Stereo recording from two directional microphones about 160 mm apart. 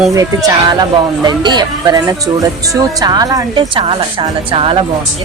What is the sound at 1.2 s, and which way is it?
A woman's voice, 25° right (ahead or behind).